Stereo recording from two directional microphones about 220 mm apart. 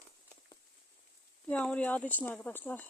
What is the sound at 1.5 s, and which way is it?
Speech, 5° left (ahead or behind).